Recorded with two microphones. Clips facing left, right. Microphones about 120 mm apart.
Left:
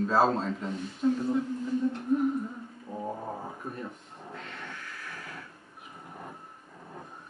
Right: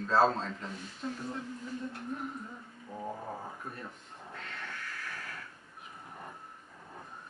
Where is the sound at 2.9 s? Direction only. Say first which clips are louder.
Left 4 dB; 15° left (ahead or behind).